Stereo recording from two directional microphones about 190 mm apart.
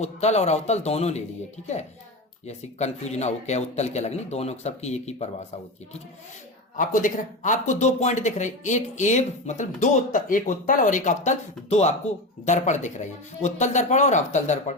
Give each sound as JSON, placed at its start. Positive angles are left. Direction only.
{"t": 0.0, "sound": "speech", "side_deg": 35}
{"t": 2.5, "sound": "speech", "side_deg": 35}
{"t": 6.7, "sound": "speech", "side_deg": 45}